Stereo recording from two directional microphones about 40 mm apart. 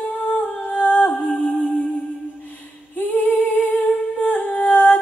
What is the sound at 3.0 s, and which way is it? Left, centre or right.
Female singing, left.